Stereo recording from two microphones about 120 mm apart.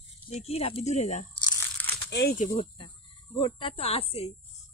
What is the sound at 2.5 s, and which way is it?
Cricket, 45° left (ahead or behind).